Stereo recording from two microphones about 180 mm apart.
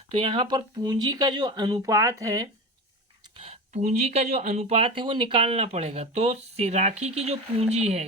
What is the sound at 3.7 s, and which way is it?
Speech, 40° right (ahead or behind).